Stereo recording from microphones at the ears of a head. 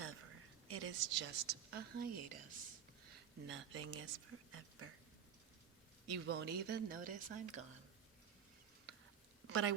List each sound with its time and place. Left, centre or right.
0.0 s a woman's voice: right
6.1 s speech: right